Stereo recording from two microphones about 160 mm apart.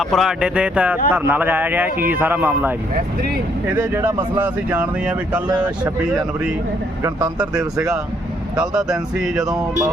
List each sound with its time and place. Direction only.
0.0 s speech: centre (ahead or behind)
3.8 s speech: 10° right (ahead or behind)
7.3 s speech: 5° right (ahead or behind)
9.6 s speech: 20° right (ahead or behind)